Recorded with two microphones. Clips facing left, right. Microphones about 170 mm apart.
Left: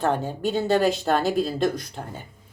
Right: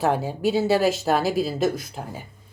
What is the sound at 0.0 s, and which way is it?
A woman's voice, 5° right (ahead or behind).